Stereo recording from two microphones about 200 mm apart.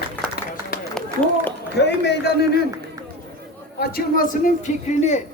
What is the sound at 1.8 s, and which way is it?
Speech, 55° left (ahead or behind).